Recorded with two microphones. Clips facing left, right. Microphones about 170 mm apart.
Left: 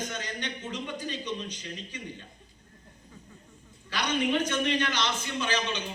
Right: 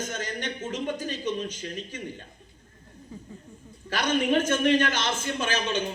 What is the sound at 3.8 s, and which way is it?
A man's voice, 45° right (ahead or behind).